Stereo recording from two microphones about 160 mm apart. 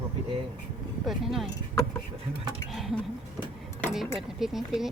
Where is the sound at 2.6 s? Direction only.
Centre (ahead or behind).